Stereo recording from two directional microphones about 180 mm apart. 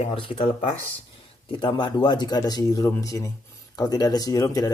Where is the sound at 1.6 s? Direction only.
25° left (ahead or behind).